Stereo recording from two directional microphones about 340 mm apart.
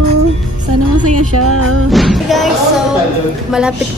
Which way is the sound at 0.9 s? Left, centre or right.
Right.